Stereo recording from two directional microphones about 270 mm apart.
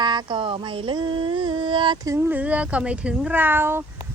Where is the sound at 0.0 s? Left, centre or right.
Centre.